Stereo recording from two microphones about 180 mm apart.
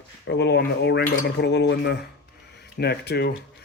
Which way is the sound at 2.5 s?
65° left (ahead or behind).